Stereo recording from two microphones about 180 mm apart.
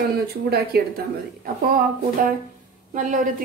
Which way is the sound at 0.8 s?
60° right (ahead or behind).